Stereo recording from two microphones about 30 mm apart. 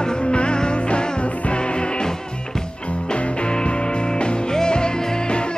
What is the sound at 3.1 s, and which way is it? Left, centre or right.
Music, left.